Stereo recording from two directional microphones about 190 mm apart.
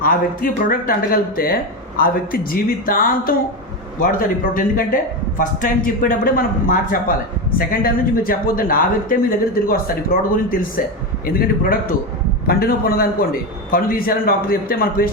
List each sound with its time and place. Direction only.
0.0 s a man's voice: 45° left (ahead or behind)